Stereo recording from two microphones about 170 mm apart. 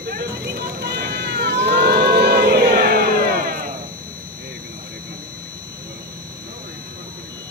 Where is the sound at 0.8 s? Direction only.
70° right (ahead or behind).